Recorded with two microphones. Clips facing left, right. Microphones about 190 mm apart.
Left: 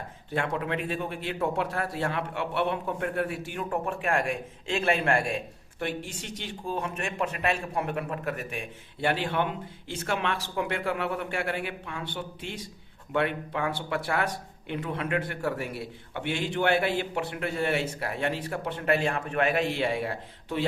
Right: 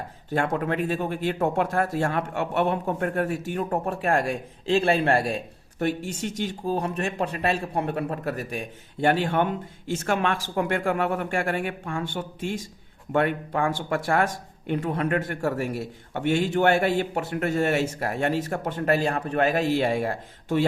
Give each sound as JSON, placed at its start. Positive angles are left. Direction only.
{"t": 0.3, "sound": "speech", "side_deg": -45}